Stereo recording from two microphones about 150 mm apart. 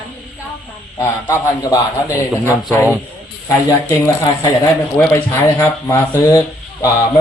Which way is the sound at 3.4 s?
20° left (ahead or behind).